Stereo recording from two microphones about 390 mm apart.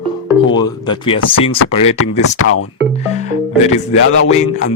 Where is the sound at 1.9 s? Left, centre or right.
Left.